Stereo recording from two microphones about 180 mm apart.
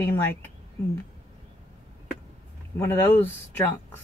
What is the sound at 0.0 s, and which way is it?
Speech, 10° left (ahead or behind).